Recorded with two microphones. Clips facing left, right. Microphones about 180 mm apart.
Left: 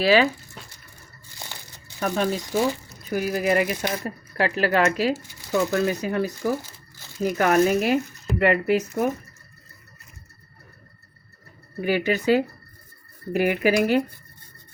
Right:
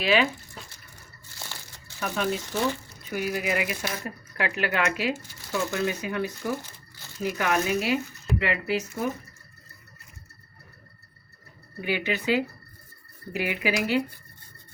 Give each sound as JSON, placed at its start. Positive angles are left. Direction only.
{"t": 0.0, "sound": "speech", "side_deg": 40}
{"t": 2.0, "sound": "speech", "side_deg": 40}
{"t": 2.5, "sound": "speech", "side_deg": 10}
{"t": 3.0, "sound": "speech", "side_deg": 40}
{"t": 11.8, "sound": "speech", "side_deg": 40}